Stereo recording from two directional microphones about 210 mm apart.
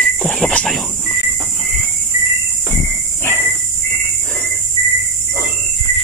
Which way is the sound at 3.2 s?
10° left (ahead or behind).